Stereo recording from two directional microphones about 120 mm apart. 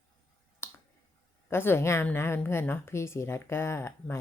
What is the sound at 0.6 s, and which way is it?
Finger snapping, 20° left (ahead or behind).